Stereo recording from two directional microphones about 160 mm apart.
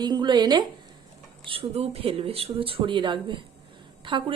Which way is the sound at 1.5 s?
40° right (ahead or behind).